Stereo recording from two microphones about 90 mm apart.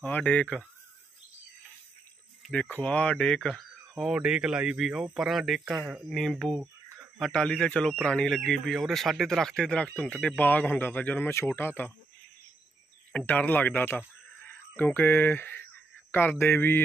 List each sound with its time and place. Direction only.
0.0 s speech: 15° left (ahead or behind)
2.5 s speech: 15° left (ahead or behind)
4.1 s speech: 10° right (ahead or behind)
6.0 s speech: centre (ahead or behind); by 11.9 s 25° left (ahead or behind)
13.1 s speech: 15° left (ahead or behind)